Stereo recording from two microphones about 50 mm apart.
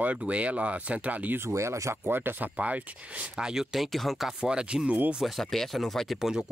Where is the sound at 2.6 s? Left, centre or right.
Right.